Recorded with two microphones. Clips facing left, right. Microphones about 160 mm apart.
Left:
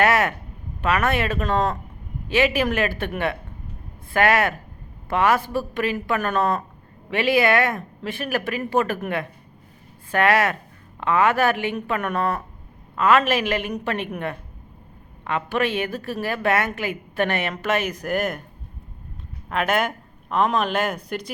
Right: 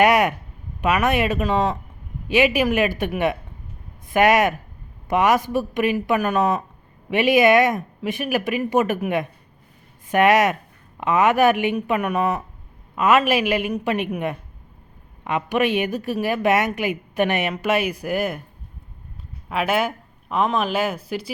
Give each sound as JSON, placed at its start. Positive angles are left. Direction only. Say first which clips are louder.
{"t": 0.0, "sound": "a woman's voice", "louder": "right 3 dB", "side_deg": -15}
{"t": 19.5, "sound": "a woman's voice", "louder": "right 1 dB", "side_deg": -5}